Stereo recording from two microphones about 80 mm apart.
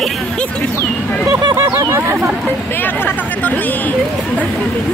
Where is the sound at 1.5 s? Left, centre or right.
Right.